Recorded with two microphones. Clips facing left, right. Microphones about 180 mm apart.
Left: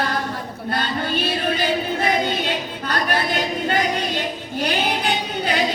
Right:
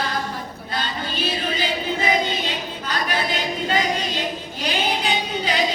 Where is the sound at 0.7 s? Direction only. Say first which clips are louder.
Left 5 dB; 60° left (ahead or behind).